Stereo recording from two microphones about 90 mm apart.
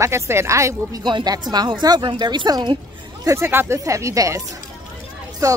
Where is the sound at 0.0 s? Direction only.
30° right (ahead or behind).